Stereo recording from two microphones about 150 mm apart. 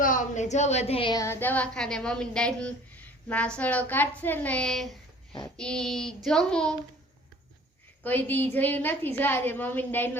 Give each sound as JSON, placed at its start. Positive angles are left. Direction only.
{"t": 0.0, "sound": "a woman's voice", "side_deg": 55}
{"t": 1.1, "sound": "a woman's voice", "side_deg": 20}
{"t": 5.5, "sound": "a sound", "side_deg": 5}
{"t": 8.0, "sound": "a woman's voice", "side_deg": 10}